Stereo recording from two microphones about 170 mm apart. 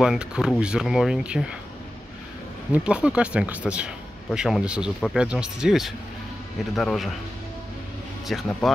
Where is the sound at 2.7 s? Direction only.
5° right (ahead or behind).